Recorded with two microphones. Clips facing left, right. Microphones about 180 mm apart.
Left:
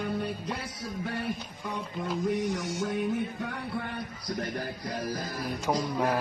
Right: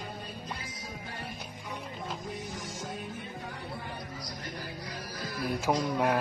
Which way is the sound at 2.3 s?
70° left (ahead or behind).